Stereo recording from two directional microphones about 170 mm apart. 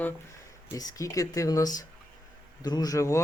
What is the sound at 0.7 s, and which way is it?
Speech, 20° left (ahead or behind).